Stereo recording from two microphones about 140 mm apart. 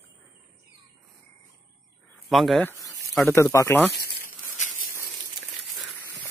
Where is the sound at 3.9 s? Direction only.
85° left.